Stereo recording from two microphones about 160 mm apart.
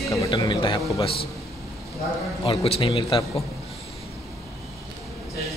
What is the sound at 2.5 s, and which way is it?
Speech, 35° left (ahead or behind).